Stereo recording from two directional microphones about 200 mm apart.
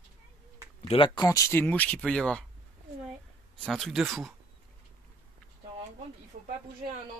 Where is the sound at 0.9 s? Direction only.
20° left (ahead or behind); by 2.4 s 5° left (ahead or behind).